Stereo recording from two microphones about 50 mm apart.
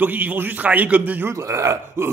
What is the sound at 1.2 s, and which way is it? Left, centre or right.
Speech, right.